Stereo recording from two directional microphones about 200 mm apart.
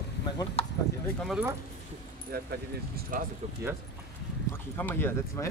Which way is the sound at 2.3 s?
50° right (ahead or behind).